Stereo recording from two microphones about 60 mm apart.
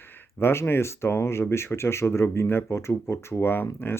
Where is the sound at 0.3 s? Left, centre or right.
Left.